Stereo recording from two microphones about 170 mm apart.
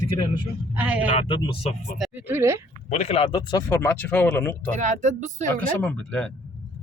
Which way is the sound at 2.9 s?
35° left (ahead or behind).